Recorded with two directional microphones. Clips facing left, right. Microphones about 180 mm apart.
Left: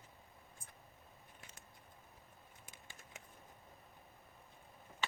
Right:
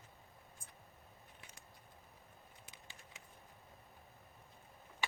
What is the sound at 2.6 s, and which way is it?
Typing, 50° left (ahead or behind).